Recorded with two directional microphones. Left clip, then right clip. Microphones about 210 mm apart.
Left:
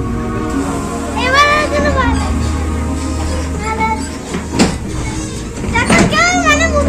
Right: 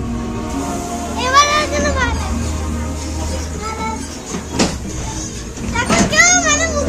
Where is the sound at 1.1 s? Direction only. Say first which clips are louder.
Left 2 dB; 55° right (ahead or behind).